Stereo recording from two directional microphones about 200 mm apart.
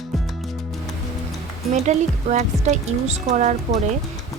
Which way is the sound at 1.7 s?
35° right (ahead or behind).